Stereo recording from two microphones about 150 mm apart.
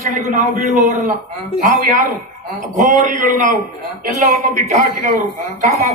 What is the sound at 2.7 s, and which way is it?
A man's voice, 55° right (ahead or behind).